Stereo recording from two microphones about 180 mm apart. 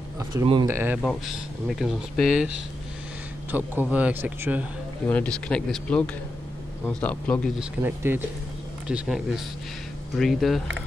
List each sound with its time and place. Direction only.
0.3 s speech: 15° right (ahead or behind)
1.0 s speech: centre (ahead or behind)
5.0 s speech: 10° left (ahead or behind)
7.8 s speech: 10° right (ahead or behind)